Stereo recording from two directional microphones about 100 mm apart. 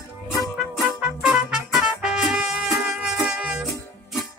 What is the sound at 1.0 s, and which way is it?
Music, 5° right (ahead or behind).